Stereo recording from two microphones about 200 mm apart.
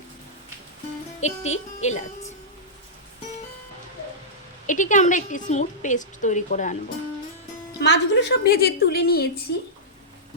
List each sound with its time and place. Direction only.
1.2 s a woman's voice: 35° left (ahead or behind)
4.6 s a woman's voice: 40° left (ahead or behind)
7.8 s a woman's voice: 60° left (ahead or behind)